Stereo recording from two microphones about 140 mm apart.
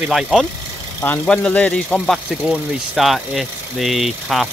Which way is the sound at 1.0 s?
10° left (ahead or behind).